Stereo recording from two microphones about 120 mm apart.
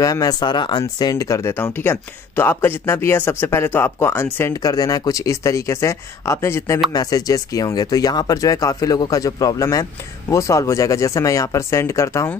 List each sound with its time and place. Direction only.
0.0 s speech: 30° left (ahead or behind)
4.6 s speech: 30° left (ahead or behind)